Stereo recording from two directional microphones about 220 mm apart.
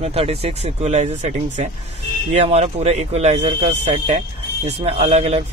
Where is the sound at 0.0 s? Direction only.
30° right (ahead or behind).